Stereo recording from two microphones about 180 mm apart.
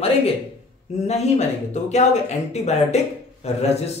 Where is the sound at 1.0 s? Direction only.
35° left (ahead or behind).